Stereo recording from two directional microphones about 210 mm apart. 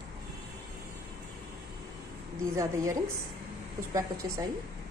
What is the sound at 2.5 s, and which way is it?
A woman's voice, 15° right (ahead or behind).